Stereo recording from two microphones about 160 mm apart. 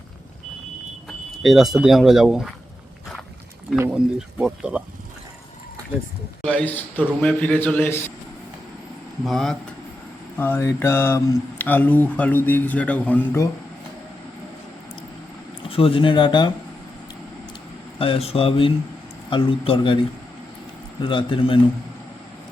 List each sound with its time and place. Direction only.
1.4 s speech: centre (ahead or behind)
4.4 s speech: 5° right (ahead or behind)
6.4 s speech: 5° left (ahead or behind)
9.2 s speech: centre (ahead or behind)
10.3 s speech: 15° left (ahead or behind)
15.7 s speech: 35° left (ahead or behind)
18.0 s speech: 35° left (ahead or behind)